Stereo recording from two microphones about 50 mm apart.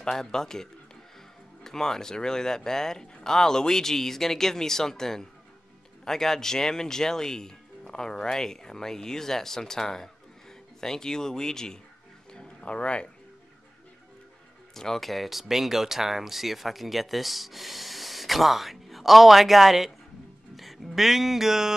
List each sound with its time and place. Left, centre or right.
0.0 s speech: centre
12.3 s a sound: centre
14.7 s speech: centre